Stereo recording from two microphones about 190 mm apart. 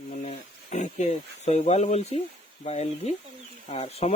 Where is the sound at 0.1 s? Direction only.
40° left (ahead or behind).